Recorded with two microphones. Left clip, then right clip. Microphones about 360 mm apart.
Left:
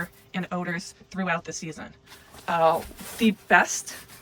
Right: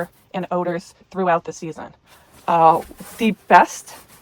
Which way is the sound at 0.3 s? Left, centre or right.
Centre.